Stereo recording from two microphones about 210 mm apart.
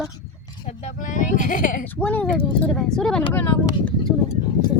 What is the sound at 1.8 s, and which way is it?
Speech, 10° left (ahead or behind).